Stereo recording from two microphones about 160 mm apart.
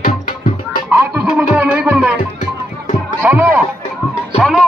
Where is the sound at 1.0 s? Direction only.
10° right (ahead or behind).